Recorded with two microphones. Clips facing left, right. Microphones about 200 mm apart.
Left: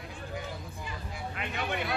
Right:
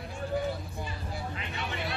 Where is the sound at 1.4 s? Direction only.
55° left (ahead or behind).